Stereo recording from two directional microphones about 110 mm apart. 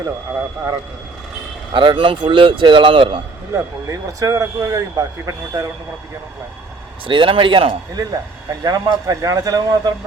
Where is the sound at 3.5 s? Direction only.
30° right (ahead or behind).